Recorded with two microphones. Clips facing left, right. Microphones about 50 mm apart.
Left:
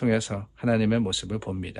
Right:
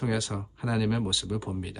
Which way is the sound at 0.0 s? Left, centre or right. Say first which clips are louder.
Left 5 dB; left.